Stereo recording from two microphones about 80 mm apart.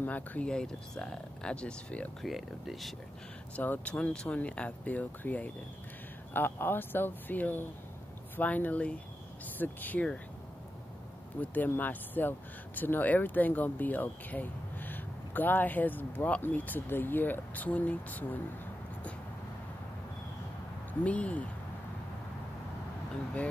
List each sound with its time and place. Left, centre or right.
0.0 s speech: centre
2.2 s speech: centre
3.5 s speech: left
11.5 s speech: left
21.0 s speech: centre